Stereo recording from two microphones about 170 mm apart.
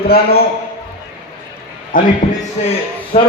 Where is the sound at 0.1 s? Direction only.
65° left (ahead or behind).